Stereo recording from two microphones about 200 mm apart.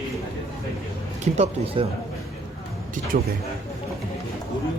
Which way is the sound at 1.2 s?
30° right (ahead or behind).